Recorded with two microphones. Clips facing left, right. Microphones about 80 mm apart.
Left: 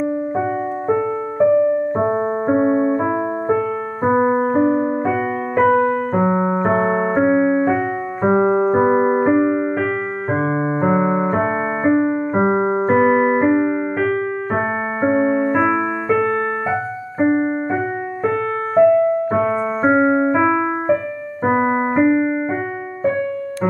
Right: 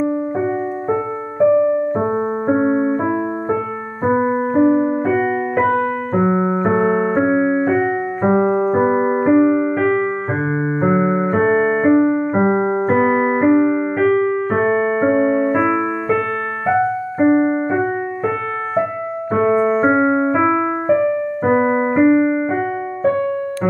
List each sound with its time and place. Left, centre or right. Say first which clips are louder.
0.0 s music: right 1 dB; centre
4.6 s piano: right 2 dB; centre
6.1 s keyboard: right 5 dB; centre
12.0 s keyboard: right 3 dB; centre
12.4 s keyboard: left 3 dB; centre
16.7 s music: right 5 dB; centre
19.3 s music: right 4 dB; centre
21.5 s keyboard: right 1 dB; centre